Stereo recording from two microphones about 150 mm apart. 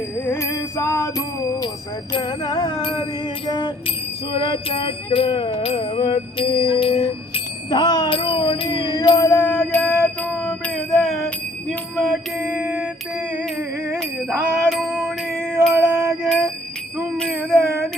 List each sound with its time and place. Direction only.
0.3 s music: 20° left (ahead or behind)
2.1 s music: 30° left (ahead or behind)
4.3 s jingle bell: 35° left (ahead or behind)
5.1 s music: 35° left (ahead or behind); by 10.5 s 5° left (ahead or behind)
10.9 s a sound: centre (ahead or behind)
11.9 s mantra: 5° right (ahead or behind)
13.9 s music: centre (ahead or behind)